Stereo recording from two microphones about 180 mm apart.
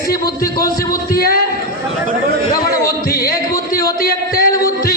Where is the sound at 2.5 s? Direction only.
20° left (ahead or behind).